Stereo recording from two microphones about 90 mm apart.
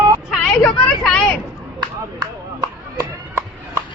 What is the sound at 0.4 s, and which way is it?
Vehicle, 15° left (ahead or behind).